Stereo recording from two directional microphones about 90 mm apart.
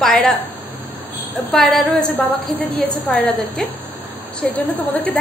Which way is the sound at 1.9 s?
20° left (ahead or behind).